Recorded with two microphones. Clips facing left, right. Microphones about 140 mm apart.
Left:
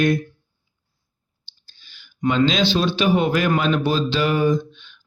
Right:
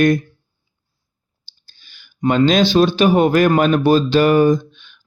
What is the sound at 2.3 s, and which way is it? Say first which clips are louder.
Speech: right 4 dB; 50° right (ahead or behind).